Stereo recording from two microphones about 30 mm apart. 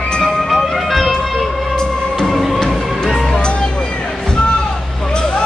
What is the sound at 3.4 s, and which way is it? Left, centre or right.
Music, left.